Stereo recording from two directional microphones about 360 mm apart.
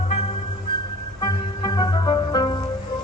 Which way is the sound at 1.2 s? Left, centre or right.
Centre.